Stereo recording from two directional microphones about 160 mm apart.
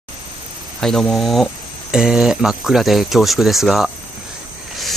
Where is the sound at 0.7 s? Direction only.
5° left (ahead or behind).